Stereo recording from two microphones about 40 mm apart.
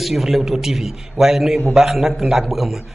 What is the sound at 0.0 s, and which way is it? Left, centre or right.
A man's voice, centre.